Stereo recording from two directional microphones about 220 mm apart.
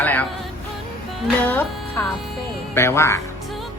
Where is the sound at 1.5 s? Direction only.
10° left (ahead or behind).